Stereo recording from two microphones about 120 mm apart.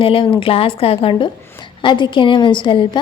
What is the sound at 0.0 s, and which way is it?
A woman's voice, 50° left (ahead or behind).